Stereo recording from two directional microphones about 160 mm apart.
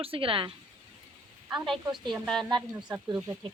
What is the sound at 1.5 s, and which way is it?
Speech, centre (ahead or behind).